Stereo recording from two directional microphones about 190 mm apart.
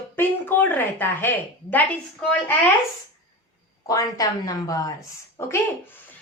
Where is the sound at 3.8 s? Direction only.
20° left (ahead or behind).